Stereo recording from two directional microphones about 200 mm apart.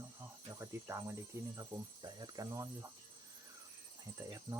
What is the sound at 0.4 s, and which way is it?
Cricket, 15° right (ahead or behind).